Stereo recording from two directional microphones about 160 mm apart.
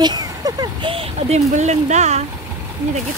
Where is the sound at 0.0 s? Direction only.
25° right (ahead or behind).